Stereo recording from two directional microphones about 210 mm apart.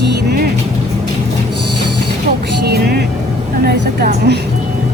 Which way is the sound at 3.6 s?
50° right (ahead or behind).